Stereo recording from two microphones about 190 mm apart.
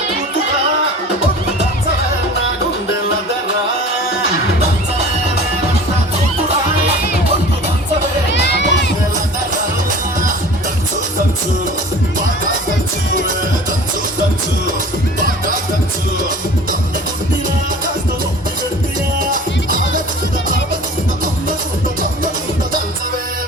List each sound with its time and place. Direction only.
8.3 s crowd: 65° left (ahead or behind)
19.2 s music: 45° right (ahead or behind)